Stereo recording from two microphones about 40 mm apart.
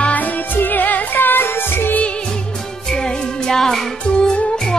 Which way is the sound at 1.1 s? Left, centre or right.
Left.